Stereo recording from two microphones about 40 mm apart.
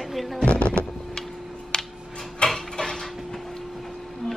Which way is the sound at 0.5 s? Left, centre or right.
Left.